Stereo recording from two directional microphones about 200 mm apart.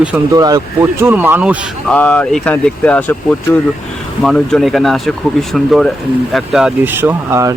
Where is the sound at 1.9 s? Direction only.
5° left (ahead or behind).